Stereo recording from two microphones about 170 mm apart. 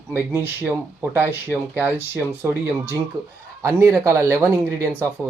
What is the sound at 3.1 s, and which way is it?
Speech, 25° right (ahead or behind).